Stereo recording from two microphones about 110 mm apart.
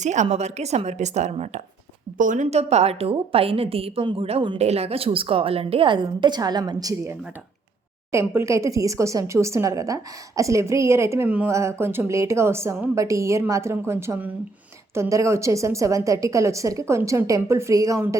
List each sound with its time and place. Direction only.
0.0 s a woman's voice: 90° right
2.3 s a woman's voice: 80° right; by 11.3 s 25° right (ahead or behind)
11.3 s speech: 15° right (ahead or behind)
11.5 s a woman's voice: 25° right (ahead or behind)